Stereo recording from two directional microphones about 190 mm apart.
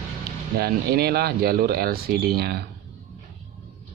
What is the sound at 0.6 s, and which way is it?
Speech, 55° right (ahead or behind).